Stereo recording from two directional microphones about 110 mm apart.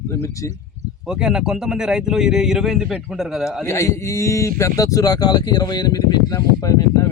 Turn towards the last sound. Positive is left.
turn(degrees=30)  # may be behind; listen again after turning